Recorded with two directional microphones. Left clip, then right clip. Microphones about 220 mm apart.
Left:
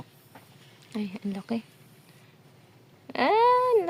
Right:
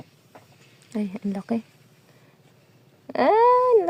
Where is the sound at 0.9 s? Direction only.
15° right (ahead or behind).